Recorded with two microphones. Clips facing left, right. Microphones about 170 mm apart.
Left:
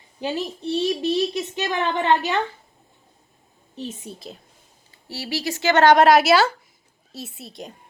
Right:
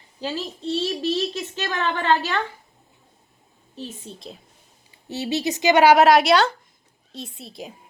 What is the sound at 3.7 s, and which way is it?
Speech, 20° left (ahead or behind).